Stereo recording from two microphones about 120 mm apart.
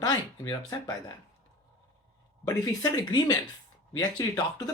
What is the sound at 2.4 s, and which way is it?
Speech, 30° left (ahead or behind).